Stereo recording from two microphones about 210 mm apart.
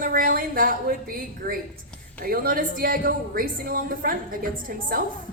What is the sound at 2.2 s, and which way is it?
A woman's voice, 45° right (ahead or behind).